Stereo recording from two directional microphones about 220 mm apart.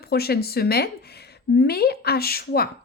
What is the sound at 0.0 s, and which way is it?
Speech, 45° left (ahead or behind).